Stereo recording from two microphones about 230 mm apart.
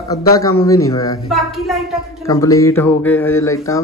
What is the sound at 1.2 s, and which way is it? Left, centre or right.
Speech, centre.